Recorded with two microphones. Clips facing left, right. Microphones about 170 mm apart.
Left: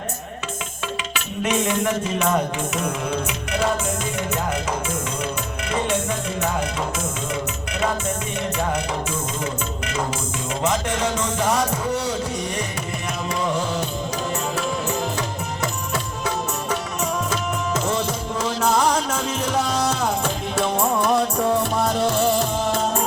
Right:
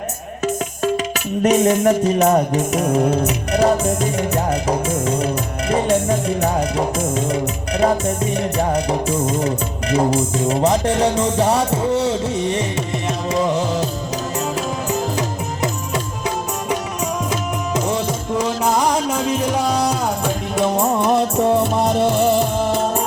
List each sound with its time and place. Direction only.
0.4 s music: 40° right (ahead or behind)
16.2 s music: 15° right (ahead or behind)